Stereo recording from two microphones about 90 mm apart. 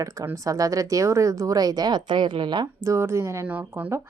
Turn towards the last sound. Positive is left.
turn(degrees=-25)  # may be behind; listen again after turning